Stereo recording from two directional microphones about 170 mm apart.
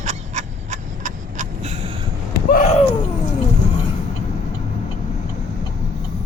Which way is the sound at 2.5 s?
45° left (ahead or behind).